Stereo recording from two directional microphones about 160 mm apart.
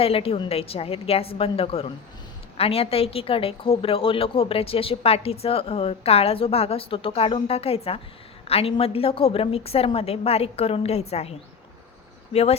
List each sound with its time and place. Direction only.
0.0 s a woman's voice: 35° left (ahead or behind)